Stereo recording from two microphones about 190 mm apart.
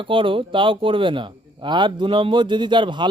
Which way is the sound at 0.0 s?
25° right (ahead or behind).